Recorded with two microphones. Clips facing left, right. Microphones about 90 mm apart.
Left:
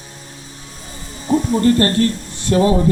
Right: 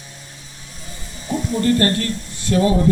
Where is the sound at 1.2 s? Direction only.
35° left (ahead or behind).